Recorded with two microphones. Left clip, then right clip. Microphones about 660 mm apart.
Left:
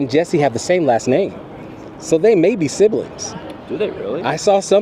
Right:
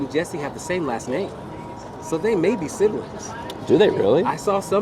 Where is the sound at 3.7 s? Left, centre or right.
Right.